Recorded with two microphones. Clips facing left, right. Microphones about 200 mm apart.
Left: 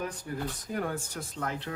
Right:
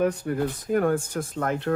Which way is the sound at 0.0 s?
60° right (ahead or behind).